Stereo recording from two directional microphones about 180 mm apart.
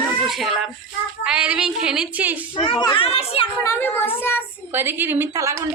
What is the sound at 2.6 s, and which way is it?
Speech, 30° left (ahead or behind).